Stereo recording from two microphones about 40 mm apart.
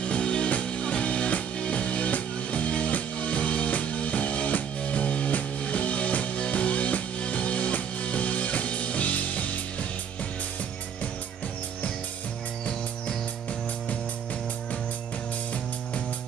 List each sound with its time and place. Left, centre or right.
0.0 s music: left